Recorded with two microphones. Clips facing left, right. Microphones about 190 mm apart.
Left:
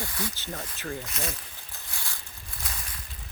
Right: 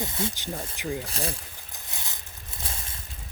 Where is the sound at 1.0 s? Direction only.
30° right (ahead or behind).